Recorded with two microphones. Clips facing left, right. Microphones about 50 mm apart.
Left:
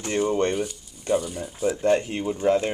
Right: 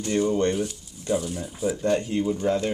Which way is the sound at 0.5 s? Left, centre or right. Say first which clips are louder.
Right 1 dB; centre.